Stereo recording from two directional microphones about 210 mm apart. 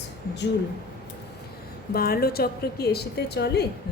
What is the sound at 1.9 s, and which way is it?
A woman's voice, 45° left (ahead or behind).